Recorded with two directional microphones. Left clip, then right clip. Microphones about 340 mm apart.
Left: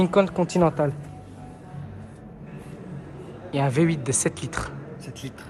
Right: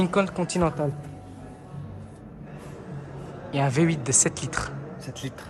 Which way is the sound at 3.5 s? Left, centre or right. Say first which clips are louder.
Left 1 dB; centre.